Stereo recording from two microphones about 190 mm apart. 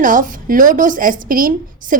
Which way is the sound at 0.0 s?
45° right (ahead or behind).